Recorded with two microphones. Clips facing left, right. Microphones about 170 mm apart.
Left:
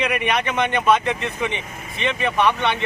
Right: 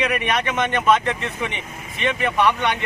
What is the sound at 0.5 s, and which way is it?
A man's voice, 15° left (ahead or behind).